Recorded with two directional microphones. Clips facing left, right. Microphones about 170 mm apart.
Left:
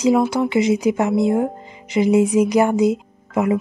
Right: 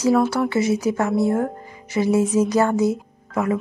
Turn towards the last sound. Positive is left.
turn(degrees=20)  # may be behind; listen again after turning